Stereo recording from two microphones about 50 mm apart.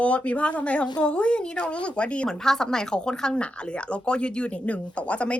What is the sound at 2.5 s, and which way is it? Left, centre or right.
Speech, centre.